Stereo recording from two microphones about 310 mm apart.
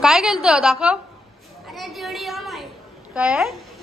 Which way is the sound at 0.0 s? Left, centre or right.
Centre.